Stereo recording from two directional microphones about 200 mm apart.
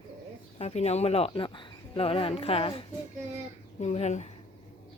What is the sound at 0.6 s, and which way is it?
Speech, 30° left (ahead or behind).